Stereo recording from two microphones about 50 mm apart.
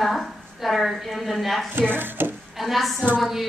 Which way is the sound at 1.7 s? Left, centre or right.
Right.